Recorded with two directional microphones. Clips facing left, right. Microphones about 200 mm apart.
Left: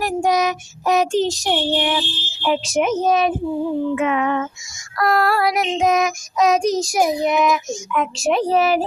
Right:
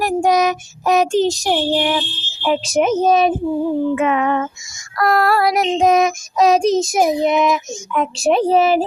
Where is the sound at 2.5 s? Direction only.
35° right (ahead or behind).